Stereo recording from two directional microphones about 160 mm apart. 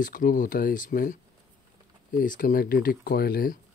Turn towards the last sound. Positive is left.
turn(degrees=65)  # may be behind; listen again after turning